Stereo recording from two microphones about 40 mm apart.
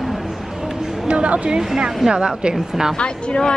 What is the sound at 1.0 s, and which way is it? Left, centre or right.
Speech, right.